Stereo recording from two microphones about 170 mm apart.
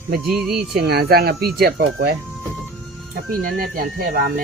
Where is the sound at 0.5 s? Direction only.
70° right (ahead or behind).